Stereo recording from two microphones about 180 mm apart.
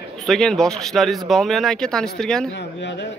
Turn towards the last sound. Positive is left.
turn(degrees=75)  # may be behind; listen again after turning